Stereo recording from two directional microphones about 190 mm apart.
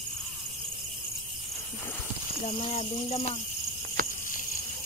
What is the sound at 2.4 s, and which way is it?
Speech, 35° left (ahead or behind).